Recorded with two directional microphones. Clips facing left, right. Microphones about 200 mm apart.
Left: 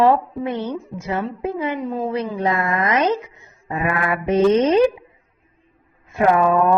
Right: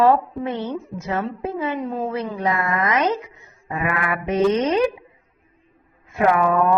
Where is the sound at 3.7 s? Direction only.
30° left (ahead or behind).